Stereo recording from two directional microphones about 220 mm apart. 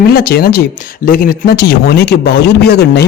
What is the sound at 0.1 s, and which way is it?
Speech, 40° left (ahead or behind).